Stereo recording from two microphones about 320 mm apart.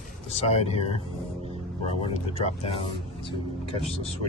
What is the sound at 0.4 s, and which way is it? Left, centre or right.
Speech, centre.